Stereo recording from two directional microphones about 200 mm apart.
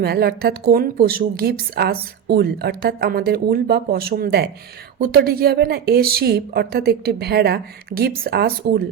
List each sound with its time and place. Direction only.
0.0 s a woman's voice: 50° right (ahead or behind)